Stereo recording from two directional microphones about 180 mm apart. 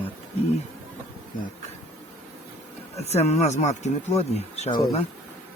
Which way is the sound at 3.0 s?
35° left (ahead or behind).